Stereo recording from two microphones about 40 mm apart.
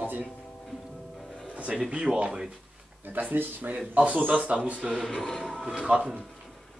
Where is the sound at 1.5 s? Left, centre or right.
Right.